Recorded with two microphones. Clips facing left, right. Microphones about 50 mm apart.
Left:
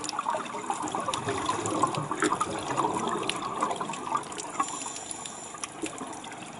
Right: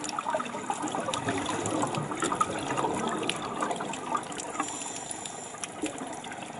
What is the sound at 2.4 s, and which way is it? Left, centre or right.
Toilet flush, right.